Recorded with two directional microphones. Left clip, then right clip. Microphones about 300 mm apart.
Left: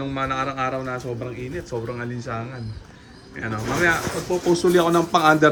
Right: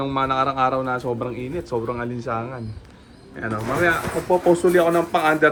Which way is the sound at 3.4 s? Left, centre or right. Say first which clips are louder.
Right 1 dB; centre.